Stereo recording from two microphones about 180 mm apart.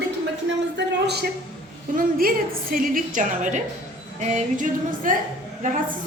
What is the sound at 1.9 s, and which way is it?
A woman's voice, 50° right (ahead or behind).